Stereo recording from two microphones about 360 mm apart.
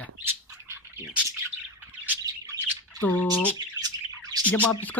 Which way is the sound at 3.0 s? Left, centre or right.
Centre.